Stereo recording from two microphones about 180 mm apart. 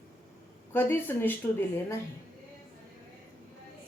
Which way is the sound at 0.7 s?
10° left (ahead or behind).